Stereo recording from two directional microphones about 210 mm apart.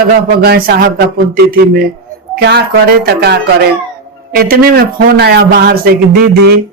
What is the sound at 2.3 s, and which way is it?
A man's voice, 50° right (ahead or behind).